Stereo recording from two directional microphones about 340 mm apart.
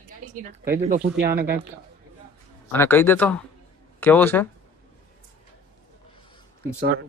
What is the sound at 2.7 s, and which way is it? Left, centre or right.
Speech, centre.